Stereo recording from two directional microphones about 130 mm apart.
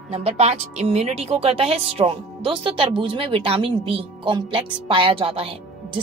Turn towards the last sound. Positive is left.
turn(degrees=-45)  # may be behind; listen again after turning